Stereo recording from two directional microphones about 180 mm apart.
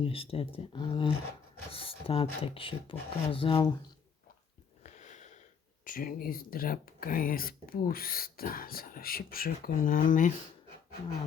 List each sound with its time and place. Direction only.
0.0 s speech: 30° left (ahead or behind)
4.8 s sniff: 40° left (ahead or behind)
5.8 s speech: 50° left (ahead or behind)